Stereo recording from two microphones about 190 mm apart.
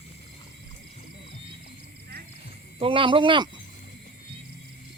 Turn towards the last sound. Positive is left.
turn(degrees=-25)  # may be behind; listen again after turning